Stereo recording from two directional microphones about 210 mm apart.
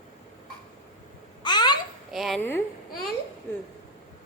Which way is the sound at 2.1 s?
Centre (ahead or behind).